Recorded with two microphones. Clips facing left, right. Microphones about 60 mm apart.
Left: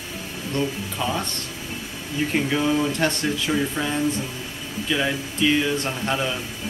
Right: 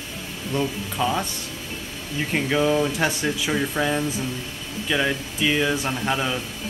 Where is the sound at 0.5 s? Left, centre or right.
Centre.